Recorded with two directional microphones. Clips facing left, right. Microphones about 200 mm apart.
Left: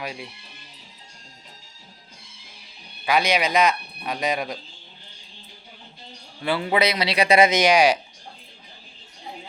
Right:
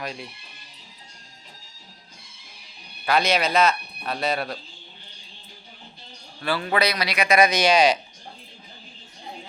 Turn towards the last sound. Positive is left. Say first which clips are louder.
# left 1 dB
turn(degrees=10)  # may be behind; listen again after turning